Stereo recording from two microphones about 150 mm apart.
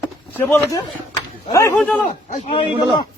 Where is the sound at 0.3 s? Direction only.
15° left (ahead or behind).